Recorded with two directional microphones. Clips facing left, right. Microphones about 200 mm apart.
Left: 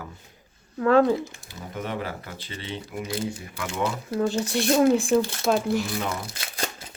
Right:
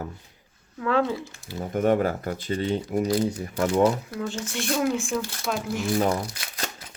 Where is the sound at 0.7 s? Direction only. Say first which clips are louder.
Left 5 dB; 45° left (ahead or behind).